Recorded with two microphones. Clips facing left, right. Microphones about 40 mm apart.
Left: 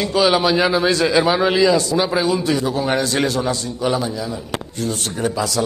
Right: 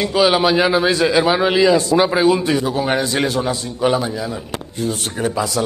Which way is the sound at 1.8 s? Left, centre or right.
Right.